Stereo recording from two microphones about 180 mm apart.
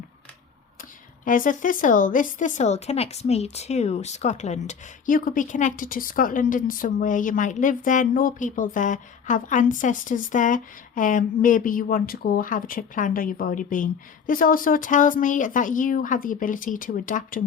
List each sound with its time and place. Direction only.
1.2 s speech: 50° left (ahead or behind)